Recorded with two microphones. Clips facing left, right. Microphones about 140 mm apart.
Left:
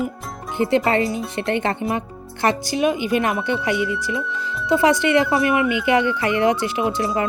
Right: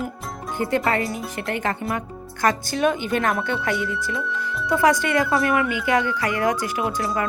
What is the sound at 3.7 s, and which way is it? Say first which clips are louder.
Speech: left 3 dB; centre (ahead or behind).